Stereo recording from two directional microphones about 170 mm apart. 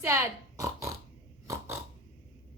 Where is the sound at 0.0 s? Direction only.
15° right (ahead or behind).